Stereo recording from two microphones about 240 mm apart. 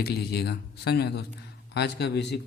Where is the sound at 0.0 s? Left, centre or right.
Left.